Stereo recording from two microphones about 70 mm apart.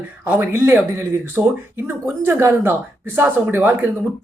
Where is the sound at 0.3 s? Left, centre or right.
Right.